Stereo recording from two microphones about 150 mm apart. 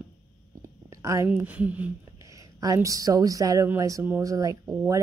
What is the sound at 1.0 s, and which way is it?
Speech, 20° right (ahead or behind).